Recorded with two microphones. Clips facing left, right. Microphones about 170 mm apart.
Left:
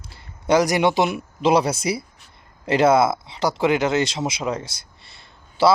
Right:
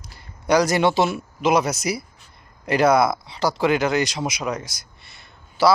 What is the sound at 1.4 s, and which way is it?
Speech, 30° left (ahead or behind).